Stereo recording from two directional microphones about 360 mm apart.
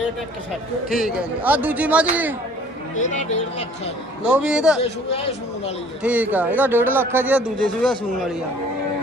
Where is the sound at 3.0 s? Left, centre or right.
Centre.